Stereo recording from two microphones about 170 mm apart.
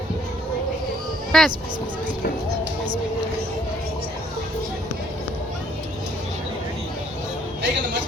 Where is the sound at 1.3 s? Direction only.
Centre (ahead or behind).